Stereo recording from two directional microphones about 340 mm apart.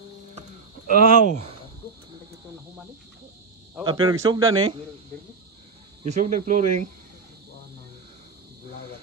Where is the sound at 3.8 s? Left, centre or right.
Centre.